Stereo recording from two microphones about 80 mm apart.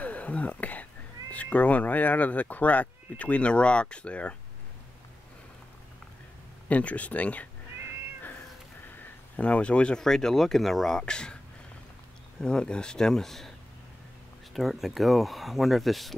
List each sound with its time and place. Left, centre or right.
0.0 s whispering: centre
1.3 s speech: centre
6.7 s speech: centre
8.9 s speech: centre
12.4 s speech: centre
14.5 s speech: centre